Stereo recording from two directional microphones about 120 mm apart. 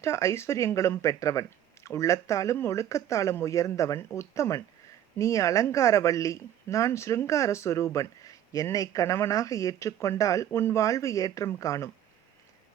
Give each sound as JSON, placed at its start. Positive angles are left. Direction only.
{"t": 0.0, "sound": "speech", "side_deg": 25}